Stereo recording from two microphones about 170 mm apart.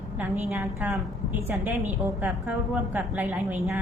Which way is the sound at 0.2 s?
15° right (ahead or behind).